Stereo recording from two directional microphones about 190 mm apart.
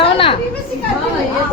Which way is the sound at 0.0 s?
30° left (ahead or behind).